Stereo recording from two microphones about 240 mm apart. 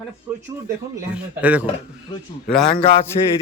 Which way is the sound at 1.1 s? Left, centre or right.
Centre.